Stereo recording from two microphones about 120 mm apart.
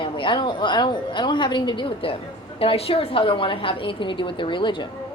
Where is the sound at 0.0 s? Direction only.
45° left (ahead or behind).